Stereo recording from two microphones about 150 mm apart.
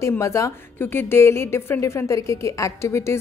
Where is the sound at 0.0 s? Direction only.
20° left (ahead or behind).